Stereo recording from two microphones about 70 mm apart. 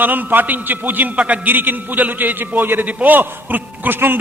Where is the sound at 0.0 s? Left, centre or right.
Right.